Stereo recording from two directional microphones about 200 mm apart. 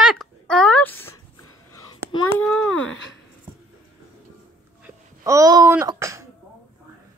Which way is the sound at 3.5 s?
10° right (ahead or behind).